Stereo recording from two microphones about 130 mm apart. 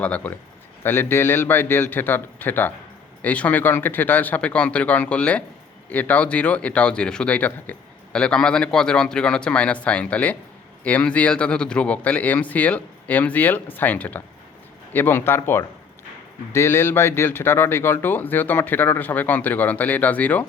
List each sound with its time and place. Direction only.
0.0 s speech: 10° left (ahead or behind)